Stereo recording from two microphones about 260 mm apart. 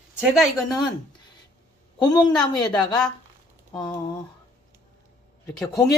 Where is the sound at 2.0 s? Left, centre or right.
Centre.